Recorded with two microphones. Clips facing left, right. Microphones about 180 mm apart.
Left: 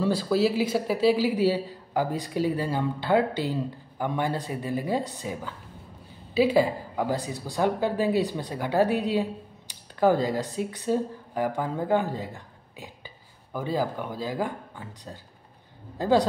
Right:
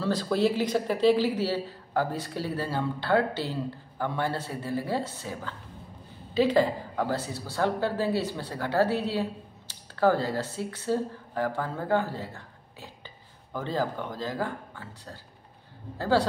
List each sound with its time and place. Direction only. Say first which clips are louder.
0.0 s a man's voice: left 2 dB; 10° left (ahead or behind)